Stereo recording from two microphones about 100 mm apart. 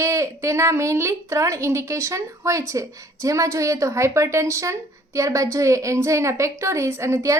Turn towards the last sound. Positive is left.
turn(degrees=-30)  # may be behind; listen again after turning